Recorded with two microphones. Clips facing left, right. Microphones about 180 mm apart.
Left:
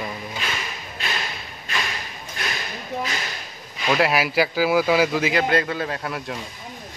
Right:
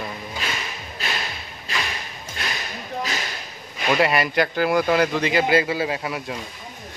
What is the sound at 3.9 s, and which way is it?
A man's voice, centre (ahead or behind).